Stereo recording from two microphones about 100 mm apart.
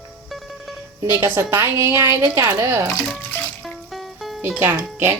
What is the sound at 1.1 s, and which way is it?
A woman's voice, 25° right (ahead or behind).